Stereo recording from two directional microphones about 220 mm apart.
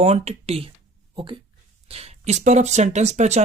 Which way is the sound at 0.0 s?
30° right (ahead or behind).